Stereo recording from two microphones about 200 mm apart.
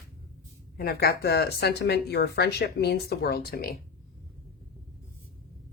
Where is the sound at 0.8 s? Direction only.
50° left (ahead or behind).